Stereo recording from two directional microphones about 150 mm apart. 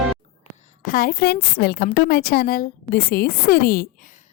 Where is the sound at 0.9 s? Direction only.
75° left (ahead or behind).